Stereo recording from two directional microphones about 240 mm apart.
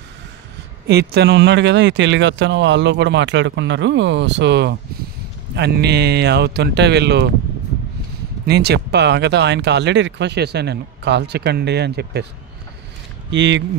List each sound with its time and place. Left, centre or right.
0.8 s speech: right
8.5 s speech: right
13.3 s speech: right